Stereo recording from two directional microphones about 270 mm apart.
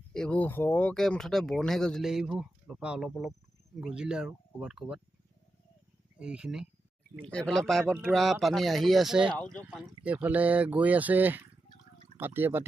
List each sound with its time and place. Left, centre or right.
0.1 s speech: centre
6.1 s speech: centre